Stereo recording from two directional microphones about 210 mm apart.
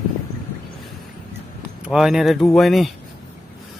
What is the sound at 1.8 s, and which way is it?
Speech, centre (ahead or behind).